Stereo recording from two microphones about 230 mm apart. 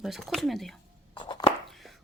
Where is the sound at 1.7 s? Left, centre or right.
Centre.